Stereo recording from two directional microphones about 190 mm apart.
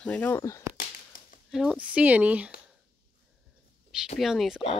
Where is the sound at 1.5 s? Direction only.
5° right (ahead or behind).